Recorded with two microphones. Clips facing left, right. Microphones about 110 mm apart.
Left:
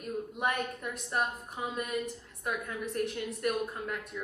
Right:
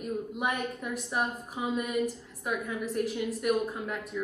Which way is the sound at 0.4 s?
Centre (ahead or behind).